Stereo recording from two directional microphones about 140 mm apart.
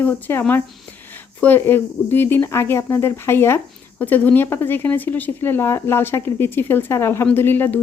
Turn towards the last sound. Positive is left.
turn(degrees=15)  # may be behind; listen again after turning